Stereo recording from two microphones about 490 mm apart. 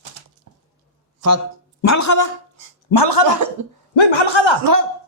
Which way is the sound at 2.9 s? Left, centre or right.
Left.